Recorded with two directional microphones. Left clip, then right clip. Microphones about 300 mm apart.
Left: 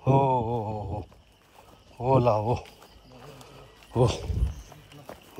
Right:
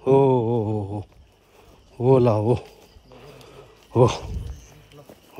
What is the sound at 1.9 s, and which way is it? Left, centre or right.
Speech, right.